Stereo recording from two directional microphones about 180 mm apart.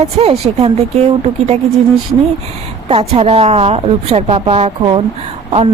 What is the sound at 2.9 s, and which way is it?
A woman's voice, 30° right (ahead or behind).